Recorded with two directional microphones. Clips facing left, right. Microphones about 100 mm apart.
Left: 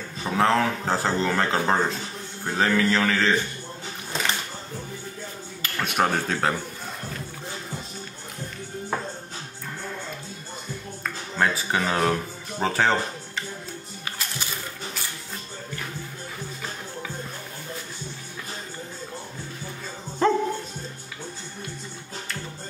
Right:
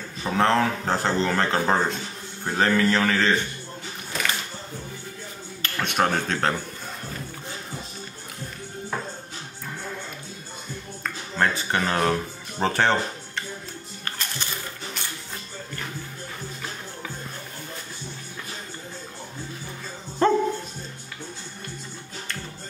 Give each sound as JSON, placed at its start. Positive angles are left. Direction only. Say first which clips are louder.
{"t": 0.2, "sound": "speech", "louder": "even", "side_deg": 5}
{"t": 4.1, "sound": "a sound", "louder": "left 1 dB", "side_deg": 25}
{"t": 5.6, "sound": "speech", "louder": "even", "side_deg": 5}
{"t": 11.3, "sound": "speech", "louder": "even", "side_deg": 5}
{"t": 14.0, "sound": "music", "louder": "right 1 dB", "side_deg": 5}
{"t": 20.2, "sound": "music", "louder": "right 1 dB", "side_deg": 0}